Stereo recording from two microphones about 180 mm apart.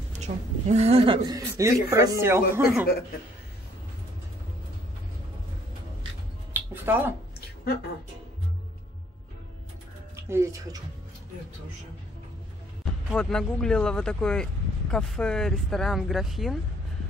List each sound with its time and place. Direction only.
0.2 s speech: 40° right (ahead or behind); by 2.9 s 10° right (ahead or behind)
6.5 s a sound: 10° right (ahead or behind)
10.3 s speech: 15° right (ahead or behind)
13.1 s speech: 5° left (ahead or behind)